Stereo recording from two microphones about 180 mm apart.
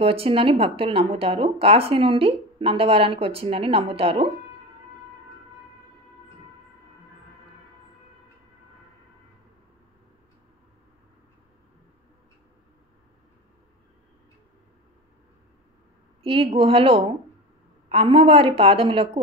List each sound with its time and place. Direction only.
0.0 s speech: 30° right (ahead or behind)
16.2 s a sound: 30° right (ahead or behind)
16.5 s speech: 30° right (ahead or behind)